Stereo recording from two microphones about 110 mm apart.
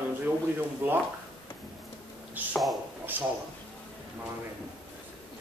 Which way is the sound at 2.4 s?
15° right (ahead or behind).